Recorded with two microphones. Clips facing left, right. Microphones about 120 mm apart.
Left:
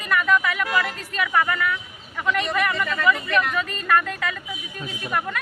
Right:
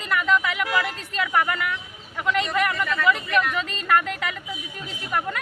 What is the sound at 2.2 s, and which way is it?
A man's voice, 20° right (ahead or behind).